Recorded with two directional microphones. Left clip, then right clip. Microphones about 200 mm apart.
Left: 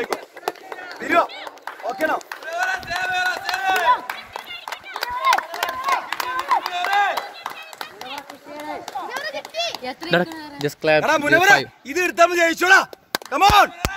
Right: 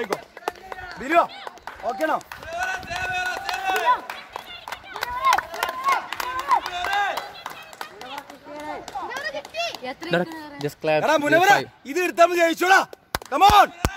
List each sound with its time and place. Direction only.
0.5 s run: 40° left (ahead or behind)
1.9 s speech: 40° right (ahead or behind)
2.5 s run: 25° left (ahead or behind)
4.9 s run: 30° left (ahead or behind)
8.5 s children playing: 35° left (ahead or behind)
10.3 s speech: 20° left (ahead or behind)
11.0 s speech: 45° right (ahead or behind)